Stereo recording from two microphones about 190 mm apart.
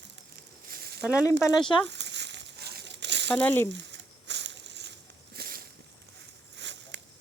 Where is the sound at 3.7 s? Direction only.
70° right (ahead or behind).